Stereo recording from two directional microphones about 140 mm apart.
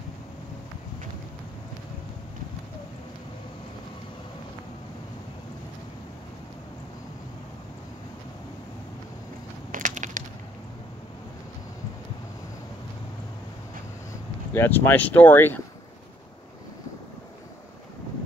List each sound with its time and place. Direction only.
9.7 s crushing: 70° right (ahead or behind)
14.5 s speech: 15° left (ahead or behind)